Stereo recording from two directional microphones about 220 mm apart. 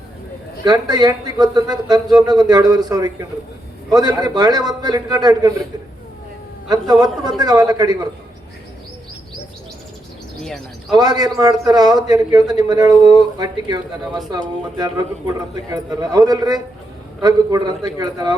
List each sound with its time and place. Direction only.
0.6 s a man's voice: 20° right (ahead or behind)
6.7 s a man's voice: 15° right (ahead or behind)
10.4 s bird: centre (ahead or behind)
10.9 s a man's voice: 15° right (ahead or behind)